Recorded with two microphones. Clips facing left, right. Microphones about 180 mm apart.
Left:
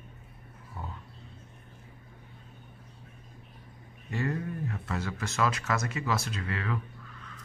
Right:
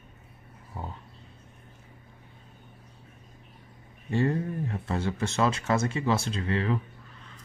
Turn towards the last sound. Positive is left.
turn(degrees=-30)  # may be behind; listen again after turning